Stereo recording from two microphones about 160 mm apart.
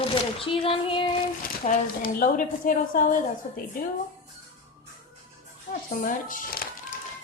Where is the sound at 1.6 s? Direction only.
60° left (ahead or behind).